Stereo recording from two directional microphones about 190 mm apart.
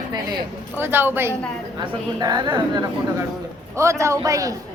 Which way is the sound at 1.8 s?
20° right (ahead or behind).